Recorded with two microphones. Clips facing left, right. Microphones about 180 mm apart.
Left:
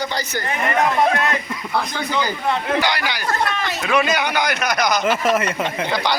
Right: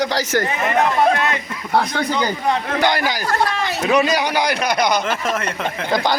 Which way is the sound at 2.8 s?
50° right (ahead or behind).